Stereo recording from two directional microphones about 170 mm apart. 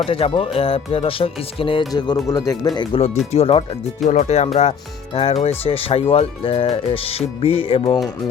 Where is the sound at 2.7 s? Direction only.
35° left (ahead or behind).